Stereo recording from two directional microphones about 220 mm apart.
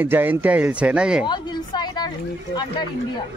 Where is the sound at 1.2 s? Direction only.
20° left (ahead or behind).